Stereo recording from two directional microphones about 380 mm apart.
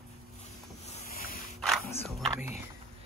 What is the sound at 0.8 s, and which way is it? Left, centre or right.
Boat, centre.